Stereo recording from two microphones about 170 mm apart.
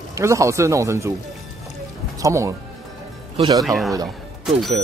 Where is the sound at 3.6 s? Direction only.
Centre (ahead or behind).